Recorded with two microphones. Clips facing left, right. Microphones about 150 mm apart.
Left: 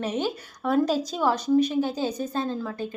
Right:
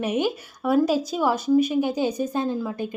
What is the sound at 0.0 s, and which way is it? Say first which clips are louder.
A woman's voice: right 4 dB; 10° right (ahead or behind).